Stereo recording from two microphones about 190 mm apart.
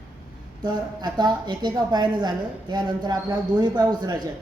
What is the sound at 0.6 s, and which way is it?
A woman's voice, 20° right (ahead or behind).